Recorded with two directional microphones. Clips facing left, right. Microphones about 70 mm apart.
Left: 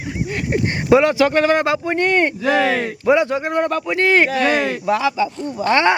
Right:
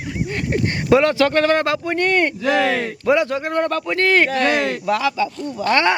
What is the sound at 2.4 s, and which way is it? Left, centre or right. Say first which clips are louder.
Speech: left 1 dB; centre.